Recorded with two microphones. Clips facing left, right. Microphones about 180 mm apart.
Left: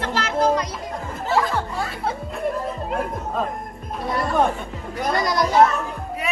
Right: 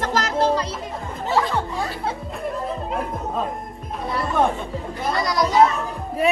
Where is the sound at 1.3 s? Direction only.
Centre (ahead or behind).